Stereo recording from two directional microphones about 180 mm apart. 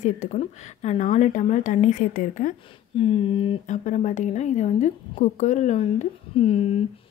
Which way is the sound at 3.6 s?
40° left (ahead or behind).